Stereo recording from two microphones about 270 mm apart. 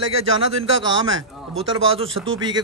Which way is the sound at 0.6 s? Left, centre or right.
Centre.